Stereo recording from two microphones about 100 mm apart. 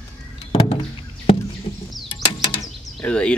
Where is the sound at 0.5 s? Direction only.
65° left (ahead or behind).